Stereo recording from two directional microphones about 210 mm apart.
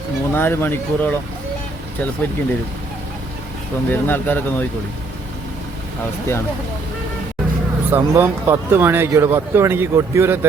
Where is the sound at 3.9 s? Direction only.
10° left (ahead or behind).